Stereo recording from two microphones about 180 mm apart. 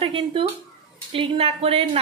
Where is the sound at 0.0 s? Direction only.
30° right (ahead or behind).